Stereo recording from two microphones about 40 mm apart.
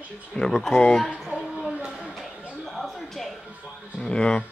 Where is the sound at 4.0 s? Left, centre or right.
Left.